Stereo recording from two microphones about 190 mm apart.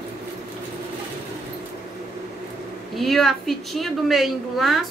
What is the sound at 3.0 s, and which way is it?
A woman's voice, centre (ahead or behind).